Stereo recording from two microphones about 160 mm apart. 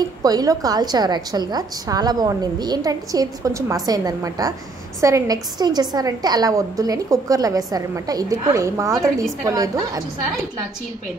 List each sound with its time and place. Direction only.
0.2 s a woman's voice: 25° right (ahead or behind)